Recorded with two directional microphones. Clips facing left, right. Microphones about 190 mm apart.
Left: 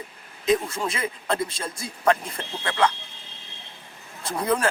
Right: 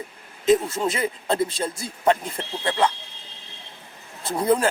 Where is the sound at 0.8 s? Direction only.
30° right (ahead or behind).